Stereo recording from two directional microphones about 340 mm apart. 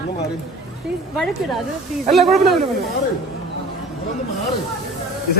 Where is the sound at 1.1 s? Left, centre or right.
Centre.